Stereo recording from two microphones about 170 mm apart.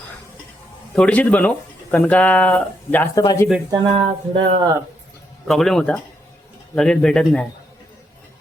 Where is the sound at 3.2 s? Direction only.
20° left (ahead or behind).